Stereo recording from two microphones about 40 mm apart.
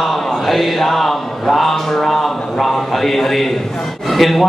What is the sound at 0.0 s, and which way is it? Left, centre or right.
A man's voice, centre.